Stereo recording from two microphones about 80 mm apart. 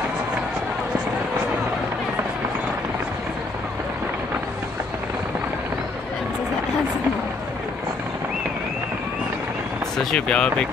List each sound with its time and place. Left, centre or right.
9.9 s speech: centre